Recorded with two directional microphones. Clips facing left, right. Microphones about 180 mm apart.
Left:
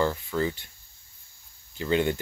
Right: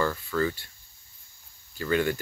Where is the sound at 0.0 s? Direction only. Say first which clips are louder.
Left 1 dB; 20° left (ahead or behind).